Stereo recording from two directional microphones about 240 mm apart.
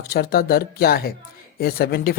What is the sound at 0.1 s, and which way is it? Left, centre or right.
Speech, left.